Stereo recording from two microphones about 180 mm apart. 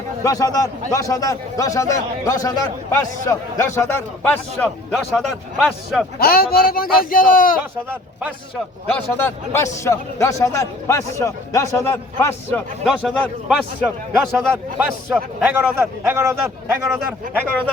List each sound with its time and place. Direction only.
0.2 s a man's voice: 20° left (ahead or behind); by 6.1 s centre (ahead or behind)
6.1 s speech: 60° left (ahead or behind)
9.1 s a man's voice: 10° left (ahead or behind)
12.8 s a man's voice: centre (ahead or behind)
14.5 s a man's voice: 10° right (ahead or behind)